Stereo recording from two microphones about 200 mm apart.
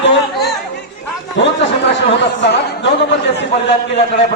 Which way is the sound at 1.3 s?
65° left (ahead or behind).